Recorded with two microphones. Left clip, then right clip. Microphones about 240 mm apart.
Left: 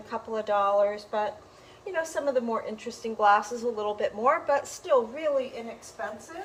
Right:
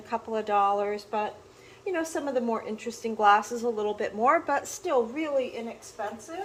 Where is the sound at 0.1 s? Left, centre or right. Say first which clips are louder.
Right 1 dB; centre.